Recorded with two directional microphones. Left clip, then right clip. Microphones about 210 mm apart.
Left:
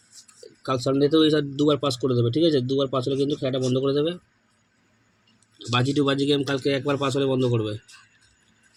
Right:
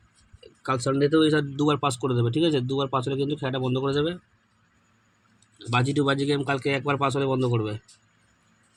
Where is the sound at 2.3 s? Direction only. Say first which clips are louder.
Left 3 dB; 15° right (ahead or behind).